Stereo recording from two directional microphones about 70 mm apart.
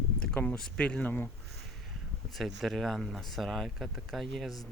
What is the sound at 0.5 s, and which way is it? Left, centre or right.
Speech, centre.